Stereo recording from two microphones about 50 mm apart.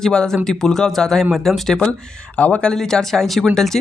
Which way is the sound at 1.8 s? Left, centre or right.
Left.